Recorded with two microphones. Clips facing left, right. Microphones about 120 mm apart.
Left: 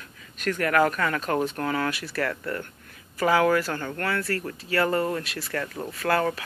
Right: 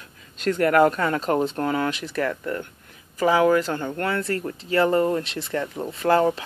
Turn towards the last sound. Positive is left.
turn(degrees=-25)  # may be behind; listen again after turning